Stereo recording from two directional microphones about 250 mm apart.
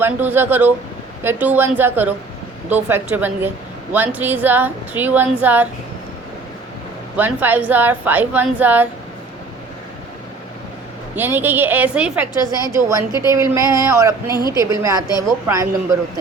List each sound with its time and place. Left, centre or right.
0.0 s a woman's voice: centre
7.2 s a woman's voice: centre
11.1 s a woman's voice: centre
14.3 s a woman's voice: centre
14.6 s a woman's voice: centre